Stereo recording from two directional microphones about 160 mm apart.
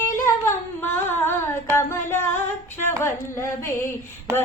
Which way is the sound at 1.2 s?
15° left (ahead or behind).